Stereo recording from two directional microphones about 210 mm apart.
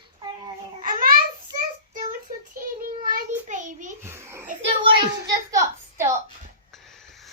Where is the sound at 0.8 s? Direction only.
40° right (ahead or behind).